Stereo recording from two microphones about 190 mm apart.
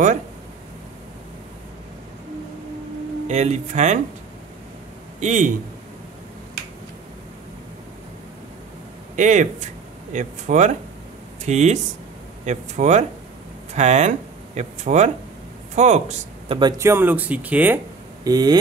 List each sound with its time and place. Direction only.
3.3 s speech: 35° right (ahead or behind)
5.2 s speech: 40° right (ahead or behind)
9.1 s speech: 40° right (ahead or behind)
16.4 s speech: 25° right (ahead or behind); by 17.7 s 10° right (ahead or behind)
18.2 s speech: 20° right (ahead or behind)